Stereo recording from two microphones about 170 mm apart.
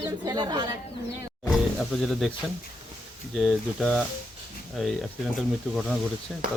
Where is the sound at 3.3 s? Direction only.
Centre (ahead or behind).